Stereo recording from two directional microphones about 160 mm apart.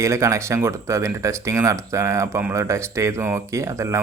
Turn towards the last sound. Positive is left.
turn(degrees=-20)  # may be behind; listen again after turning